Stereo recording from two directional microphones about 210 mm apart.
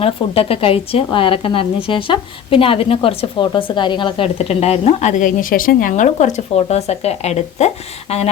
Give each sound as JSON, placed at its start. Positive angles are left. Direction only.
{"t": 0.0, "sound": "a woman's voice", "side_deg": 25}